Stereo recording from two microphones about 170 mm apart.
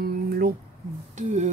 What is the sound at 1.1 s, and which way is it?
Speech, 45° right (ahead or behind).